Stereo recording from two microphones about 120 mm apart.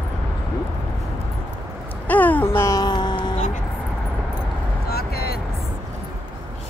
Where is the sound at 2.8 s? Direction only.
40° left (ahead or behind).